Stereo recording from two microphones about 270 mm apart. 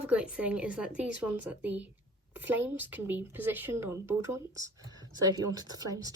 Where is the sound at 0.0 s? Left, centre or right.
Centre.